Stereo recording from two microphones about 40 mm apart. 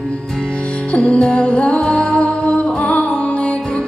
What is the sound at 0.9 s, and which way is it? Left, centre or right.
Music, left.